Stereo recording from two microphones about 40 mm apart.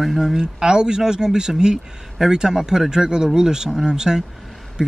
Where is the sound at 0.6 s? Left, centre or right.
Centre.